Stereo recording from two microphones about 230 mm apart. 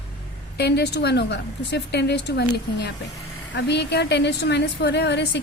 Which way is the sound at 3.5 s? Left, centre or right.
Left.